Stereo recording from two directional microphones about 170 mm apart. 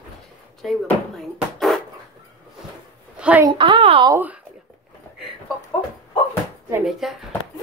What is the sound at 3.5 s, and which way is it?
Speech, 30° right (ahead or behind).